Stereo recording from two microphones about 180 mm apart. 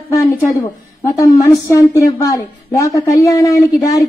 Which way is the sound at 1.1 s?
15° left (ahead or behind).